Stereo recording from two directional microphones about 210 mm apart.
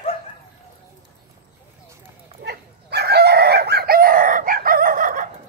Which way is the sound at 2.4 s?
50° right (ahead or behind).